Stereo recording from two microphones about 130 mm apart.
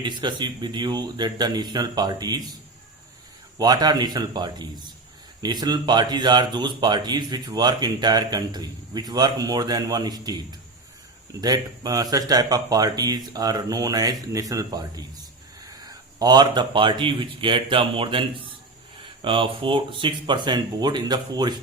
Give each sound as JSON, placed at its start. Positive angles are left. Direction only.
{"t": 0.0, "sound": "speech", "side_deg": -35}
{"t": 3.6, "sound": "speech", "side_deg": -30}
{"t": 11.3, "sound": "speech", "side_deg": -30}